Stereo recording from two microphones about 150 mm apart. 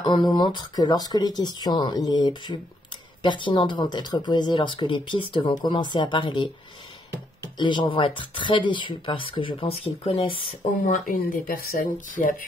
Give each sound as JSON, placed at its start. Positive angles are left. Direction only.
{"t": 0.0, "sound": "speech", "side_deg": 30}
{"t": 7.5, "sound": "speech", "side_deg": 30}
{"t": 11.1, "sound": "speech", "side_deg": 75}